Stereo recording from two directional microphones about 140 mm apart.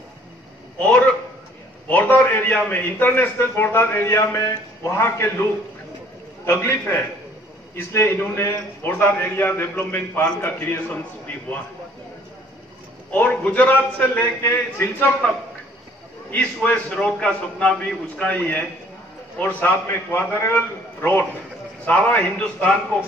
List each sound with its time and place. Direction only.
0.7 s a sound: 10° left (ahead or behind)
1.9 s a man's voice: 10° left (ahead or behind)
6.4 s a man's voice: 20° left (ahead or behind)
13.1 s a man's voice: 10° left (ahead or behind)